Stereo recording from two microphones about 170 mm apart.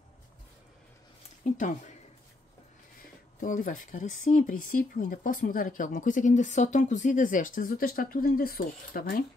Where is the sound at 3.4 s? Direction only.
50° left (ahead or behind).